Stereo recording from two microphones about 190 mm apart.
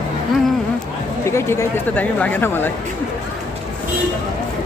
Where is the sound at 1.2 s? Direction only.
15° left (ahead or behind).